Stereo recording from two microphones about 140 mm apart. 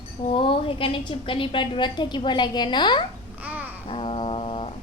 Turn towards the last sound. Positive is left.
turn(degrees=40)  # may be behind; listen again after turning